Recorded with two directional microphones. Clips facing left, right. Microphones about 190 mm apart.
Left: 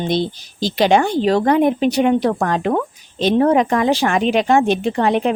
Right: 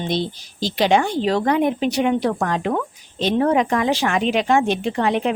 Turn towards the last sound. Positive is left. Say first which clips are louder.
# left 3 dB
turn(degrees=45)  # may be behind; listen again after turning